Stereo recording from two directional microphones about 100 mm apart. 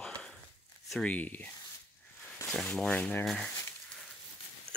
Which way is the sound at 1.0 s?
15° left (ahead or behind).